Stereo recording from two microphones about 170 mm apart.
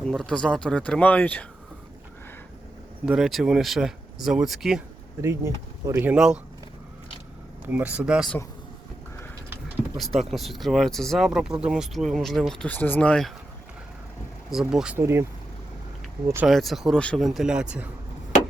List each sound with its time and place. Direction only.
0.0 s speech: 5° left (ahead or behind)
3.1 s speech: centre (ahead or behind)
5.2 s speech: 15° right (ahead or behind)
7.6 s speech: 10° right (ahead or behind)
10.0 s speech: centre (ahead or behind)
14.7 s speech: 5° right (ahead or behind)
15.0 s speech: 15° right (ahead or behind)
16.5 s speech: centre (ahead or behind)